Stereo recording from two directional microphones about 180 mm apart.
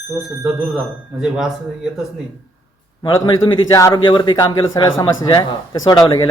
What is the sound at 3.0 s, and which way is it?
A man's voice, 25° left (ahead or behind).